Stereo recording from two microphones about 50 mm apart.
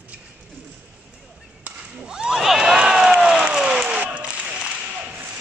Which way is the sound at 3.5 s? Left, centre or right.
Centre.